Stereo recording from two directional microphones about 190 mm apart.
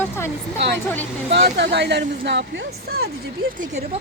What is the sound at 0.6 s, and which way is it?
A woman's voice, 65° right (ahead or behind).